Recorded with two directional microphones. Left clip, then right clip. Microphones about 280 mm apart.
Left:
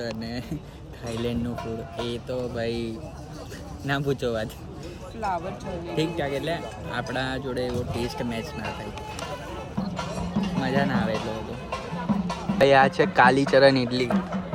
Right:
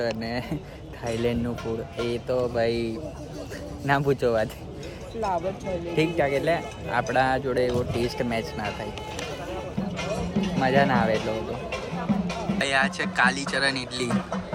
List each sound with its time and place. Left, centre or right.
0.0 s speech: centre
3.8 s speech: centre
6.0 s speech: centre